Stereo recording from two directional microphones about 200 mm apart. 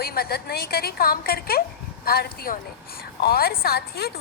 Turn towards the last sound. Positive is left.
turn(degrees=50)  # may be behind; listen again after turning